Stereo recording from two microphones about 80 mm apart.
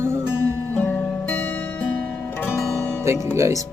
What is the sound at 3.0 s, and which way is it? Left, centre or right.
Music, right.